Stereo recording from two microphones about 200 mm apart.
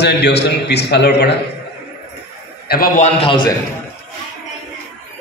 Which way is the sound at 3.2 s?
25° left (ahead or behind).